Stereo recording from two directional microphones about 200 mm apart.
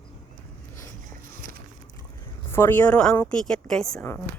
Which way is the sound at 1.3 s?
45° right (ahead or behind).